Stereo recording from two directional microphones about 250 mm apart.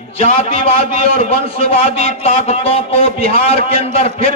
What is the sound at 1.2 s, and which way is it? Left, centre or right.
A man's voice, left.